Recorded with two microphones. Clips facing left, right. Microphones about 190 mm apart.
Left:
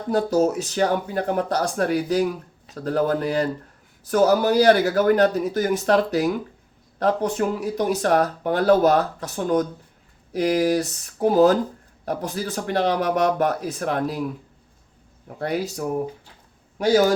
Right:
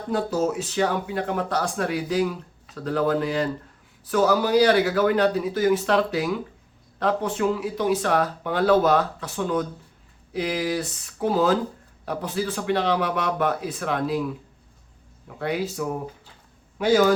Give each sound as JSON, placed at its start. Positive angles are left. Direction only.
{"t": 0.1, "sound": "speech", "side_deg": 40}
{"t": 15.4, "sound": "speech", "side_deg": 40}